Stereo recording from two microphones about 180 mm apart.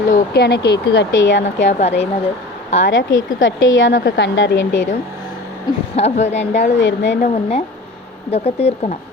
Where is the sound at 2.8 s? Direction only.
90° left.